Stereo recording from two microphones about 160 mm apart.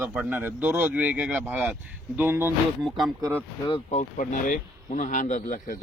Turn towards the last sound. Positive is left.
turn(degrees=55)  # may be behind; listen again after turning